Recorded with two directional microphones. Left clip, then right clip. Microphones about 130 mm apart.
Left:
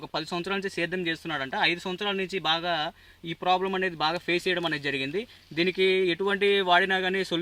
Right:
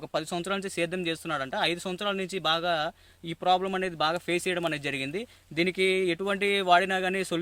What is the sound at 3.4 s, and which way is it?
Speech, 35° right (ahead or behind).